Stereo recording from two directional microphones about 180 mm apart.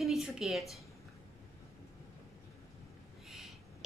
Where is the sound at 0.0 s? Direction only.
Centre (ahead or behind).